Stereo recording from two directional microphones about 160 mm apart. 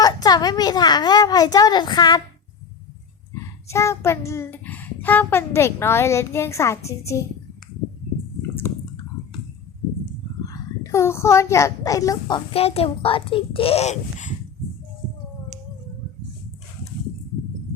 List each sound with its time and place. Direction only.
0.0 s a woman's voice: 25° left (ahead or behind)
3.7 s a child's voice: 15° left (ahead or behind)
8.4 s drip: 15° left (ahead or behind)
10.4 s a child's voice: 20° left (ahead or behind)
12.5 s a child's voice: 40° left (ahead or behind)